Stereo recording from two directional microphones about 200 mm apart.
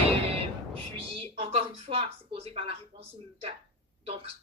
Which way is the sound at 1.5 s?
30° right (ahead or behind).